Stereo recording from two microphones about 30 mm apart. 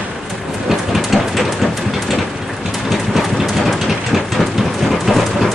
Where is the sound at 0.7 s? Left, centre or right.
Centre.